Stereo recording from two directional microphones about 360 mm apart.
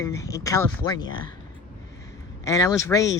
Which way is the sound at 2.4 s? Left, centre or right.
Centre.